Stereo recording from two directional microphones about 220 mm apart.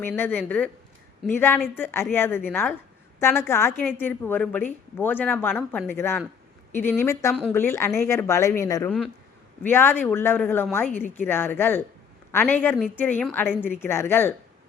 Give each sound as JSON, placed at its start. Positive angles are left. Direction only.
{"t": 0.0, "sound": "speech", "side_deg": 10}